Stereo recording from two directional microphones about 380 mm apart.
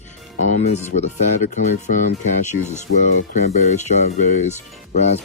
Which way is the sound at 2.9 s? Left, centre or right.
Left.